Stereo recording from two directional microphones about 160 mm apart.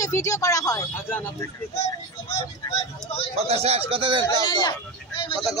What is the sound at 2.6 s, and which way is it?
Vehicle, 35° left (ahead or behind).